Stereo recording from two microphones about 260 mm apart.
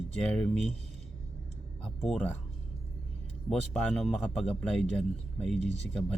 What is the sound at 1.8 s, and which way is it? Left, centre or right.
Speech, centre.